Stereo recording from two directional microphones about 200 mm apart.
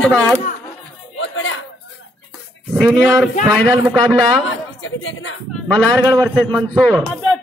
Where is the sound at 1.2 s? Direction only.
75° left (ahead or behind).